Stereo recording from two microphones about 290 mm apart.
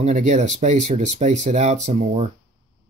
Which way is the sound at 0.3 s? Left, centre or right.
Right.